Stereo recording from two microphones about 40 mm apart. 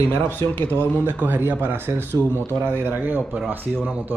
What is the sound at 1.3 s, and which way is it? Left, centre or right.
Speech, right.